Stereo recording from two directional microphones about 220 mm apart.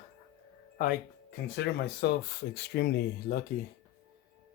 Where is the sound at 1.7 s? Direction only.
50° left (ahead or behind).